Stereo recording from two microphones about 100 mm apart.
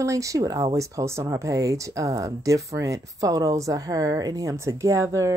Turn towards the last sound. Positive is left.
turn(degrees=-30)  # may be behind; listen again after turning